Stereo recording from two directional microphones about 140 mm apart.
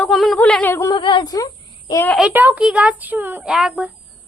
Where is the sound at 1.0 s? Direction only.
35° left (ahead or behind).